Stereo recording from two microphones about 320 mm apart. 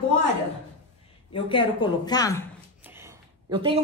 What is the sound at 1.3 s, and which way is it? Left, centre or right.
A woman's voice, centre.